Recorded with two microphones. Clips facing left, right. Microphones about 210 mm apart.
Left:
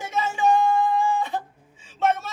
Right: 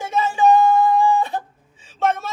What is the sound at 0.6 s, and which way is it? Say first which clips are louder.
Singing: right 5 dB; 45° right (ahead or behind).